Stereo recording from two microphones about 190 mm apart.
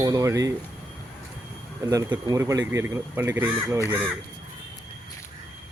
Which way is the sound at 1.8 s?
20° right (ahead or behind).